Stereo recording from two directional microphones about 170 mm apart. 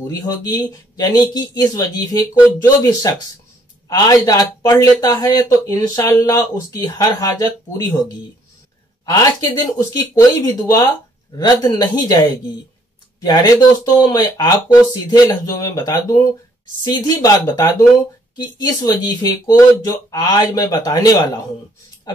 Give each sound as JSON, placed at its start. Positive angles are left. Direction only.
{"t": 0.0, "sound": "speech", "side_deg": 20}
{"t": 9.0, "sound": "speech", "side_deg": 20}
{"t": 13.2, "sound": "speech", "side_deg": 25}